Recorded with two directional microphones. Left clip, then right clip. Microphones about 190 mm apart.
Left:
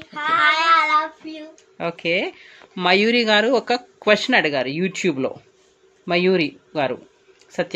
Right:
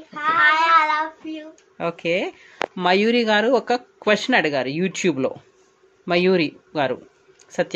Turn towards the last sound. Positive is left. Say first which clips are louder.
# right 1 dB
turn(degrees=-5)  # may be behind; listen again after turning